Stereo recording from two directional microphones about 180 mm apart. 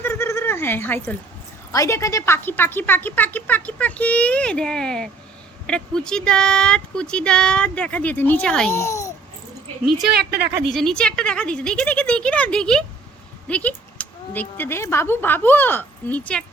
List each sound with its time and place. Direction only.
0.0 s a sound: 15° left (ahead or behind)
1.7 s a woman's voice: 15° left (ahead or behind)
8.7 s a child's voice: 15° left (ahead or behind)
10.1 s speech: 65° right (ahead or behind)
10.7 s speech: centre (ahead or behind)